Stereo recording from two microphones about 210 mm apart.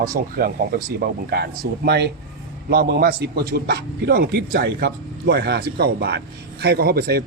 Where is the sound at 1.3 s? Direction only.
50° right (ahead or behind).